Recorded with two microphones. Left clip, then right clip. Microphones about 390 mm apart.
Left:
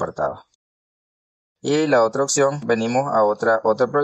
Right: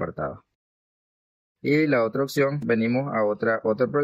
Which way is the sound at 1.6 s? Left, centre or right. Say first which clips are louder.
Left 4 dB; left.